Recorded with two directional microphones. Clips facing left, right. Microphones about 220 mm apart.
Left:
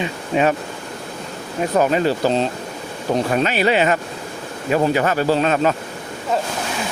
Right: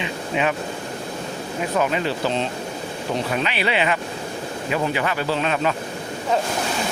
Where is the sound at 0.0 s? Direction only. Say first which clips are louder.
Left 5 dB; 40° left (ahead or behind).